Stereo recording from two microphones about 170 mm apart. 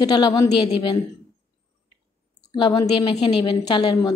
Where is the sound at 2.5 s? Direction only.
30° left (ahead or behind).